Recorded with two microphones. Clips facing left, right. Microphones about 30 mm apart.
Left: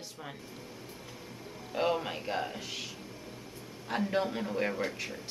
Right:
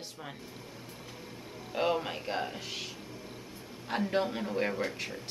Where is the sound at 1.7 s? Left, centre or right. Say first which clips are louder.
Even; centre.